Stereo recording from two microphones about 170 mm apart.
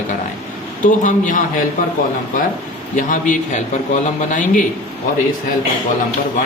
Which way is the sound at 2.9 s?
45° left (ahead or behind).